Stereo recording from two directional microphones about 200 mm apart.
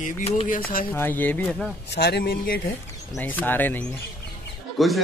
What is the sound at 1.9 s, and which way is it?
Speech, 55° left (ahead or behind).